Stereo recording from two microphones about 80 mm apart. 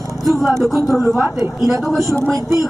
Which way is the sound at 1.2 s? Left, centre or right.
Right.